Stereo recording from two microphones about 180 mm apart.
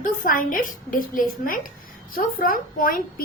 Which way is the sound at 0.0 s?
50° left (ahead or behind).